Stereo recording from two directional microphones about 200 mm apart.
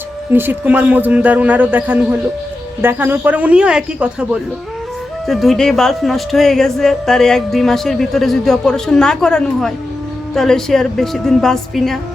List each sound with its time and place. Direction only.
0.3 s a man's voice: 10° right (ahead or behind)